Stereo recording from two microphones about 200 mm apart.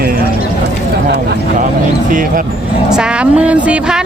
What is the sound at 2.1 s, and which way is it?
Speech, 40° right (ahead or behind).